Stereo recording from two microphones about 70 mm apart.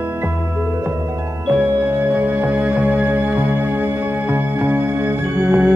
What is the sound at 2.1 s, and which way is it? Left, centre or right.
Music, right.